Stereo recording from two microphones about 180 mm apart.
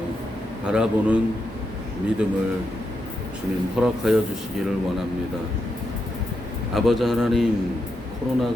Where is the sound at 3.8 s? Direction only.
Centre (ahead or behind).